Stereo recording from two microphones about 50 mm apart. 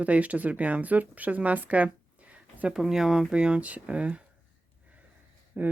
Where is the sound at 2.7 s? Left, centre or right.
Centre.